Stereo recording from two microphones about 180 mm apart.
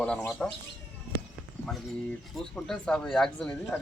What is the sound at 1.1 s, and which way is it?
Walk, 55° right (ahead or behind).